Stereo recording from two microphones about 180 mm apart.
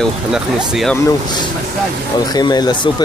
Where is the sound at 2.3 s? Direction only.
25° left (ahead or behind).